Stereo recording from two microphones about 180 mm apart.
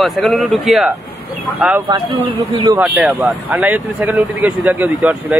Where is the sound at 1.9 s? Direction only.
25° right (ahead or behind).